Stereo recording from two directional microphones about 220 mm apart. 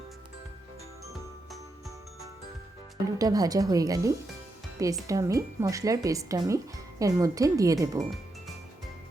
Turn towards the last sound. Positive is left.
turn(degrees=-15)  # may be behind; listen again after turning